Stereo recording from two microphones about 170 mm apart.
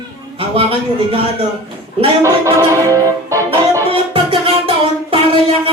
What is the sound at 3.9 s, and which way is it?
Music, 30° right (ahead or behind).